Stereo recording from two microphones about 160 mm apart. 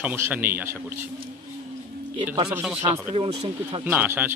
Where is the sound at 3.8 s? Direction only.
10° right (ahead or behind).